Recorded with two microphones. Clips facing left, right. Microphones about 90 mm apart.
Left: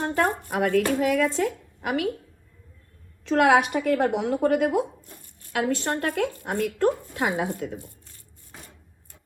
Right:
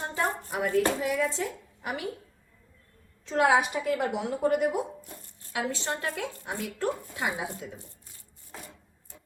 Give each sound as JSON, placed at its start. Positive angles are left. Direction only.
{"t": 0.0, "sound": "a sound", "side_deg": 55}
{"t": 1.0, "sound": "a woman's voice", "side_deg": 65}
{"t": 3.2, "sound": "a woman's voice", "side_deg": 70}
{"t": 5.5, "sound": "a woman's voice", "side_deg": 60}